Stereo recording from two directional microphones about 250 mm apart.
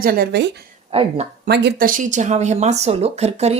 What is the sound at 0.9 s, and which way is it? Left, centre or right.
Speech, right.